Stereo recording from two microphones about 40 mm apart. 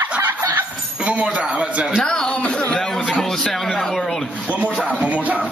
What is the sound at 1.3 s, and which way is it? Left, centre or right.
Speech, right.